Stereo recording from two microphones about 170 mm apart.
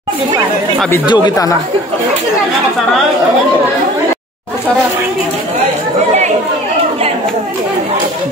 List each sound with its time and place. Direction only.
1.0 s speech: 25° left (ahead or behind)